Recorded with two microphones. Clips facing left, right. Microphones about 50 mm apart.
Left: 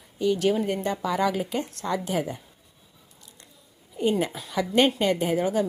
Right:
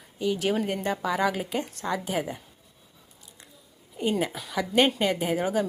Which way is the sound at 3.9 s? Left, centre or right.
Centre.